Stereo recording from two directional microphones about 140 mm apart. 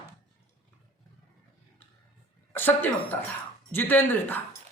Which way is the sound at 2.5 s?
15° left (ahead or behind).